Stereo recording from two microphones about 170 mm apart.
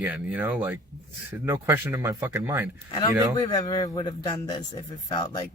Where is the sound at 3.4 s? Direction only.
25° left (ahead or behind).